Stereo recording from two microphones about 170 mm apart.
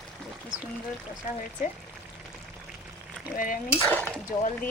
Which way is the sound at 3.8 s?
10° left (ahead or behind).